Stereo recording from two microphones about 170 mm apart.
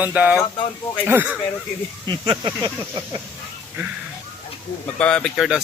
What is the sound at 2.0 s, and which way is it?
Speech, 25° right (ahead or behind).